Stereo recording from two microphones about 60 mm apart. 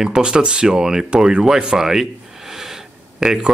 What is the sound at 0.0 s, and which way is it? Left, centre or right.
Speech, centre.